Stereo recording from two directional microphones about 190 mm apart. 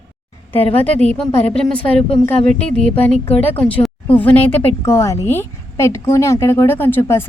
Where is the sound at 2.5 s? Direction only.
35° left (ahead or behind).